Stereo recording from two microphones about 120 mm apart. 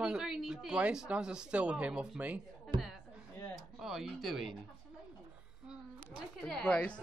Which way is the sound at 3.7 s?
5° right (ahead or behind).